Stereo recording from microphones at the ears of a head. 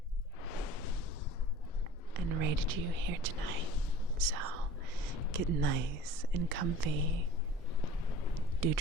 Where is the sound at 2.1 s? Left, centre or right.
Right.